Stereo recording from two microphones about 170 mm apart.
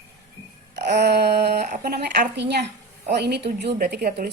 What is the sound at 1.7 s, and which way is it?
A woman's voice, 55° right (ahead or behind).